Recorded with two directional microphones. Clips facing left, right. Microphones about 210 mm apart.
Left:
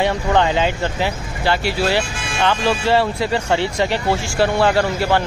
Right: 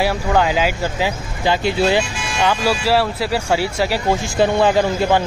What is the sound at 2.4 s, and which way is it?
Speech, 10° right (ahead or behind).